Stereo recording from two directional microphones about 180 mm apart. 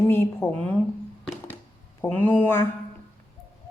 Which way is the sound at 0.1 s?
10° left (ahead or behind).